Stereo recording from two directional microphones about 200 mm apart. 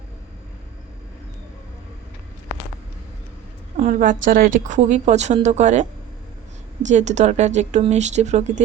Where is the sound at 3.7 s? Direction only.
40° right (ahead or behind).